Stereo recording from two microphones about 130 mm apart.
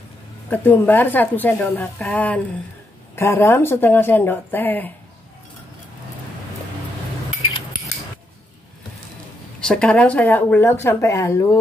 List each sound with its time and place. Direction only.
0.5 s speech: 15° left (ahead or behind)
9.6 s speech: 5° left (ahead or behind)